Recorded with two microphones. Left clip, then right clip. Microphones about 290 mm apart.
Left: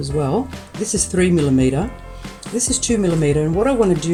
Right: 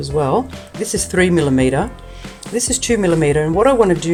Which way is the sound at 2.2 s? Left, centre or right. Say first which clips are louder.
Right 3 dB; centre.